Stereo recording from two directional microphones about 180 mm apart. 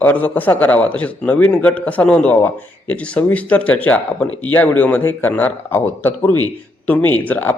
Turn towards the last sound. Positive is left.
turn(degrees=10)  # may be behind; listen again after turning